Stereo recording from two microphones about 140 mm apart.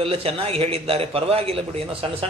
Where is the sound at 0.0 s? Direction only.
45° right (ahead or behind).